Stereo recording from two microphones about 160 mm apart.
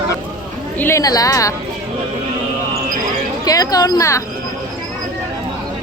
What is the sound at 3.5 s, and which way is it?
Speech, 20° left (ahead or behind).